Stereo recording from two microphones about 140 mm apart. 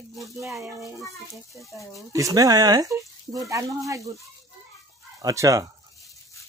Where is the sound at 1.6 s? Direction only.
Centre (ahead or behind).